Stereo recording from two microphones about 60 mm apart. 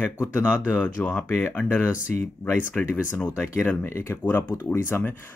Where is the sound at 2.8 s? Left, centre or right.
Left.